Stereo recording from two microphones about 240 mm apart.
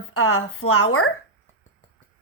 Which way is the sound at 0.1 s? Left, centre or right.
Left.